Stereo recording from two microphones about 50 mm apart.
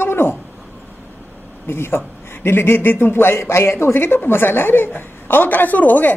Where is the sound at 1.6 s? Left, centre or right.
Left.